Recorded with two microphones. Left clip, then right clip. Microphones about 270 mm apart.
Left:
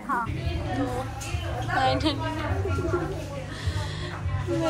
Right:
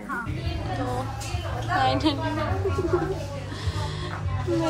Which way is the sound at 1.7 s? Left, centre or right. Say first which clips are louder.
Right 1 dB; centre.